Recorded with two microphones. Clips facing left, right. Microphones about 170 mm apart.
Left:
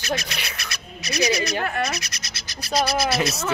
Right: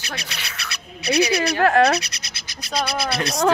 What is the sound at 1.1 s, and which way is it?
Speech, 60° right (ahead or behind).